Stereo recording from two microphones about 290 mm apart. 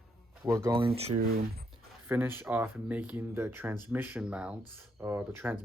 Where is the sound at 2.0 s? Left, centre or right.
Centre.